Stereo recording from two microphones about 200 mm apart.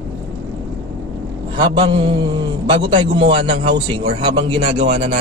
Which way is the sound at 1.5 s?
25° right (ahead or behind).